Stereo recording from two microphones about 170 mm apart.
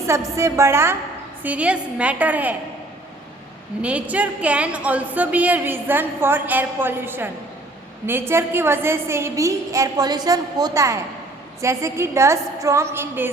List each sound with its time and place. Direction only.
0.1 s a woman's voice: 15° right (ahead or behind)
3.8 s a woman's voice: 5° right (ahead or behind)